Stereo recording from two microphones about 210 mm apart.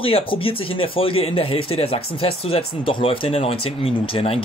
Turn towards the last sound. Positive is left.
turn(degrees=25)  # may be behind; listen again after turning